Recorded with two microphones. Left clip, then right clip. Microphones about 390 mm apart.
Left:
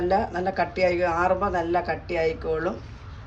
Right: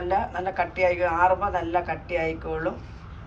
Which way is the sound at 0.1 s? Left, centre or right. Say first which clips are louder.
Left 2 dB; centre.